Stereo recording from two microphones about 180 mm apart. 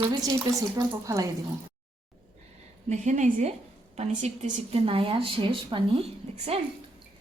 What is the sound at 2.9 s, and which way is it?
A woman's voice, 45° right (ahead or behind).